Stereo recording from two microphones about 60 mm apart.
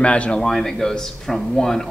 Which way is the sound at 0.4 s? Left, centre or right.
Centre.